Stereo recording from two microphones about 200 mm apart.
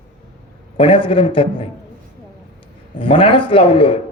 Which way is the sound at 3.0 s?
25° left (ahead or behind).